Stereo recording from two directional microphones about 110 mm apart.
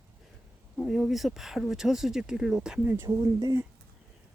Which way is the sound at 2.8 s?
20° right (ahead or behind).